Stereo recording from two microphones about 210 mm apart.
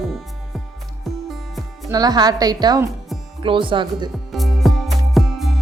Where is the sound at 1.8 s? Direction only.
15° right (ahead or behind).